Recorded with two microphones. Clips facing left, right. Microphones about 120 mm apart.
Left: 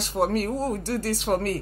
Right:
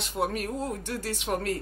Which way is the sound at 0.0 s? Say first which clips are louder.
Left 5 dB; 35° left (ahead or behind).